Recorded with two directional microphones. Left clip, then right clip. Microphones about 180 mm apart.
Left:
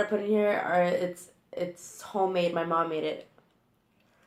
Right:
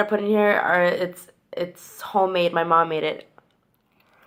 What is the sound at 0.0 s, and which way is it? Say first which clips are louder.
Speech: right 6 dB; 55° right (ahead or behind).